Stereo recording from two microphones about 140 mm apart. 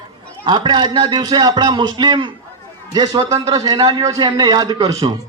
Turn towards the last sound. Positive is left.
turn(degrees=-30)  # may be behind; listen again after turning